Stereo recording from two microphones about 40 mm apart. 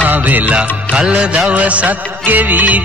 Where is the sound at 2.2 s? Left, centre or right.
Right.